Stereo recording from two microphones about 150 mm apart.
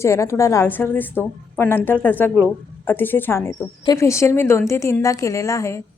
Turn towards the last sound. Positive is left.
turn(degrees=20)  # may be behind; listen again after turning